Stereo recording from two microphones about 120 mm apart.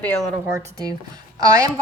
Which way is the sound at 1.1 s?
30° right (ahead or behind).